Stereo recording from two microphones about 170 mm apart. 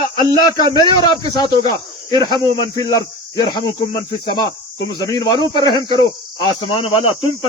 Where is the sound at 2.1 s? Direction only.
25° right (ahead or behind).